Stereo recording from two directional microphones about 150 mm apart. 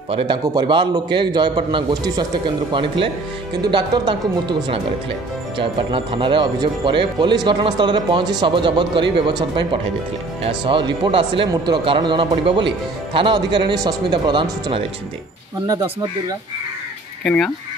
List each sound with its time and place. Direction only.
0.1 s speech: 35° right (ahead or behind)
15.6 s speech: 25° right (ahead or behind)
17.2 s speech: 5° left (ahead or behind)